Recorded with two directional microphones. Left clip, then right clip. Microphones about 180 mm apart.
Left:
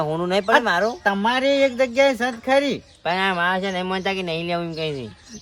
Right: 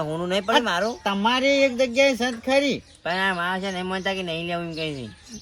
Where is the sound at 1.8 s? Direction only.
5° left (ahead or behind).